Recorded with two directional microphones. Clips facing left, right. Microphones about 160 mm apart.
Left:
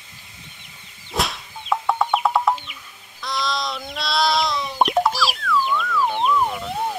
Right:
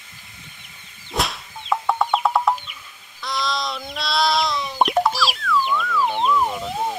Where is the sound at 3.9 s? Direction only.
Centre (ahead or behind).